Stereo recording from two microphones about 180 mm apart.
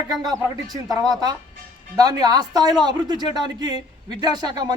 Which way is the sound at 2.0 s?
20° right (ahead or behind).